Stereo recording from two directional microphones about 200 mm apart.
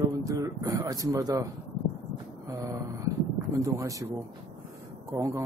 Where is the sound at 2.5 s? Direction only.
20° right (ahead or behind).